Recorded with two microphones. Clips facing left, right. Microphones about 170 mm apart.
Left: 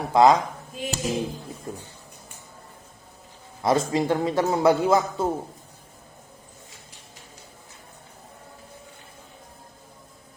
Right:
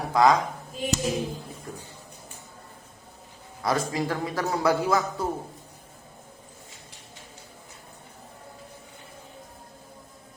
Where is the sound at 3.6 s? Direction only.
25° left (ahead or behind).